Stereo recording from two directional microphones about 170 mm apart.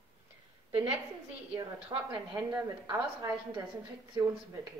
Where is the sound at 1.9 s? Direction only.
25° right (ahead or behind).